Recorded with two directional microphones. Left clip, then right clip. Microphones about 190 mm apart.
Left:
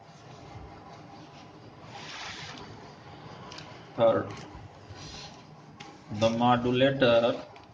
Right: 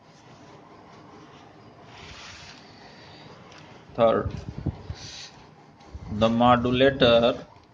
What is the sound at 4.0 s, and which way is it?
Speech, 50° right (ahead or behind).